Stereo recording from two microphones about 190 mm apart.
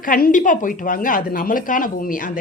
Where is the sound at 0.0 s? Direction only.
45° left (ahead or behind).